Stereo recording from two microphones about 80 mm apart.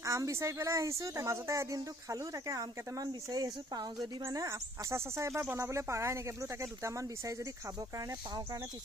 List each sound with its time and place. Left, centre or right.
0.0 s speech: right
3.1 s speech: right
4.4 s speech: right